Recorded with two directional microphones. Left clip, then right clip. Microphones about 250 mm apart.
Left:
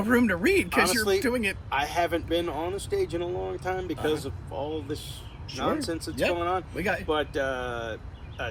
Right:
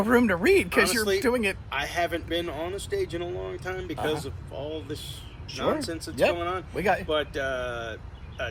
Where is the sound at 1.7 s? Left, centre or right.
Centre.